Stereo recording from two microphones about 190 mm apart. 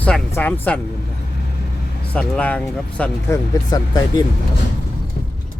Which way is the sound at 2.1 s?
5° left (ahead or behind).